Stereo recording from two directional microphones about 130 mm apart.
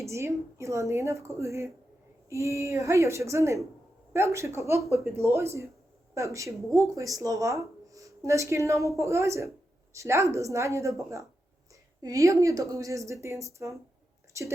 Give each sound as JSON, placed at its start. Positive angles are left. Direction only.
{"t": 0.0, "sound": "speech", "side_deg": -20}